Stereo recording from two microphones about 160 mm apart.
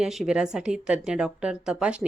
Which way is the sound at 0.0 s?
5° right (ahead or behind).